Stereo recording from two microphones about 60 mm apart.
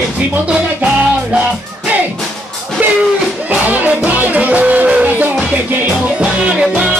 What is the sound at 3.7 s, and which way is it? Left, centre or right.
Music, right.